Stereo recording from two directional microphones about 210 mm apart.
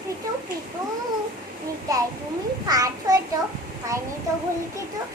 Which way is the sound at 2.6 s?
15° right (ahead or behind).